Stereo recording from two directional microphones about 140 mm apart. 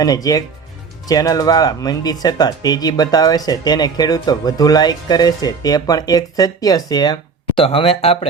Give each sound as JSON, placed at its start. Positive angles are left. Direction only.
{"t": 0.0, "sound": "speech", "side_deg": 25}